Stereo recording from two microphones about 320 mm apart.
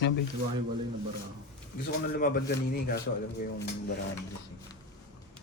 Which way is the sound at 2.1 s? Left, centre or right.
Left.